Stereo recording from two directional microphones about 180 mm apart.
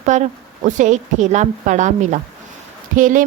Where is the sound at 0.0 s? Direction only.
40° right (ahead or behind).